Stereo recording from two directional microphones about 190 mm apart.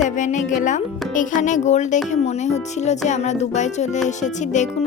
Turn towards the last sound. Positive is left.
turn(degrees=40)  # may be behind; listen again after turning